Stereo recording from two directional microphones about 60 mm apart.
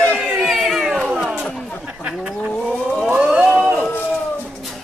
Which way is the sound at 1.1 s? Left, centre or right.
Centre.